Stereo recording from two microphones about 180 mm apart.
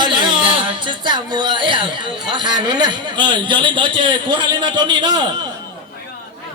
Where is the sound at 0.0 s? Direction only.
25° right (ahead or behind).